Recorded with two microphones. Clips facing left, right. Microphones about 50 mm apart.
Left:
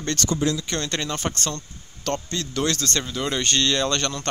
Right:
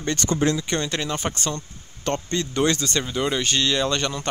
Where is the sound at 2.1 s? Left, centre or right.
Right.